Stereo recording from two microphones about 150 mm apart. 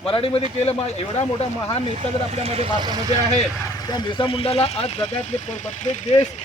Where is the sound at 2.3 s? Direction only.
45° right (ahead or behind).